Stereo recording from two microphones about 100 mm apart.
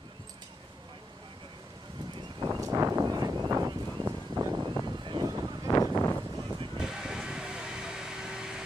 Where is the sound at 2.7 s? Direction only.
30° right (ahead or behind).